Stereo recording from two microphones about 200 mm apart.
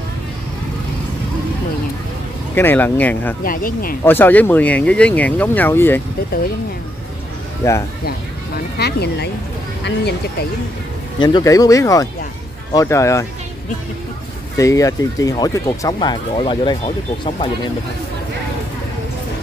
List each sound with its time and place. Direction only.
2.5 s speech: 10° left (ahead or behind)
3.4 s speech: 45° left (ahead or behind)
4.0 s speech: 10° left (ahead or behind)
7.6 s speech: 15° left (ahead or behind)
8.7 s speech: 55° left (ahead or behind)
11.1 s speech: 20° left (ahead or behind)
14.6 s speech: 15° left (ahead or behind)